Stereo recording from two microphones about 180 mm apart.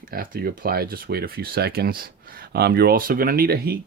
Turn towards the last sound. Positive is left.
turn(degrees=-55)  # may be behind; listen again after turning